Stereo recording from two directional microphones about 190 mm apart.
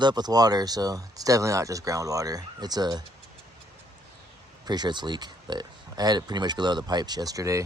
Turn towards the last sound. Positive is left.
turn(degrees=-15)  # may be behind; listen again after turning